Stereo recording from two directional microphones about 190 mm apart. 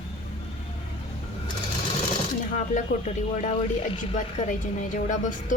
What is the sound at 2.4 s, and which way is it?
Speech, 40° left (ahead or behind).